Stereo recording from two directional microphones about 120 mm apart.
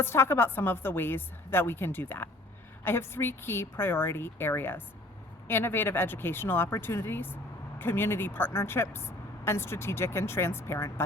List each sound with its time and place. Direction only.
0.0 s a woman's voice: 20° left (ahead or behind)